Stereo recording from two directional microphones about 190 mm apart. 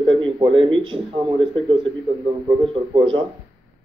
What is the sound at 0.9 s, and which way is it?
Speech, 30° right (ahead or behind).